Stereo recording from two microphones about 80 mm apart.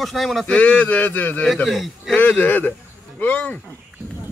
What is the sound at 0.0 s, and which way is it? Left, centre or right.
Speech, centre.